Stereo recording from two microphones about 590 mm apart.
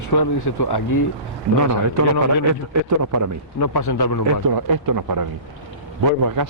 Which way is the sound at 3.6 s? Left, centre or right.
Left.